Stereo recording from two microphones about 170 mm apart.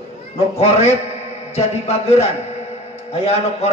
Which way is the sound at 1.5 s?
40° left (ahead or behind).